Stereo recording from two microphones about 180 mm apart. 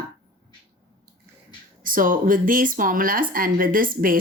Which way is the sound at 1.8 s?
50° right (ahead or behind).